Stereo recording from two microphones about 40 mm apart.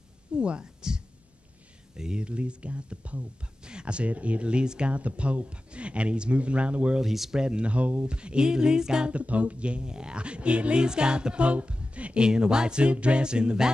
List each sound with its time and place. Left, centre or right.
0.4 s speech: right
2.2 s speech: right
7.0 s speech: centre
7.3 s speech: right
9.1 s speech: right
12.2 s speech: centre